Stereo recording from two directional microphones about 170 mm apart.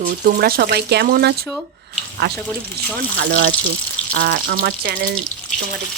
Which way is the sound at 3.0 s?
65° right (ahead or behind).